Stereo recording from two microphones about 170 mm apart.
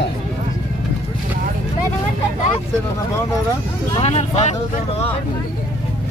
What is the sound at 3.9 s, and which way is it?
Speech, 35° left (ahead or behind).